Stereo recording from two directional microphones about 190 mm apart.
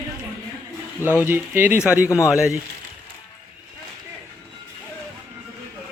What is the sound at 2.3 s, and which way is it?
Speech, 5° right (ahead or behind).